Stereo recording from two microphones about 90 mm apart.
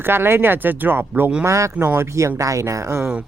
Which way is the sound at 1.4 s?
35° right (ahead or behind).